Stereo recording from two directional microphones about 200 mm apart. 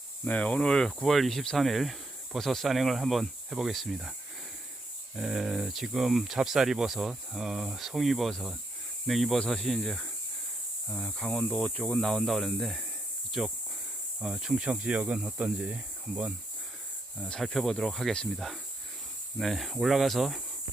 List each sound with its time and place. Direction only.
0.3 s speech: 5° left (ahead or behind)
5.1 s speech: 5° right (ahead or behind)